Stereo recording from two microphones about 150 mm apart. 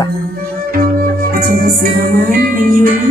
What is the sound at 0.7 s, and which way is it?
Music, 80° right.